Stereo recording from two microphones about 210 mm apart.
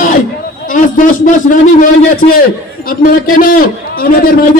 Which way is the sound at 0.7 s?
40° left (ahead or behind).